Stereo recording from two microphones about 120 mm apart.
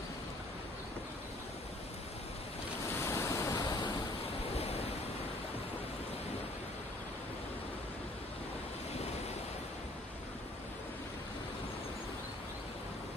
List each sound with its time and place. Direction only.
3.0 s waves: 25° left (ahead or behind)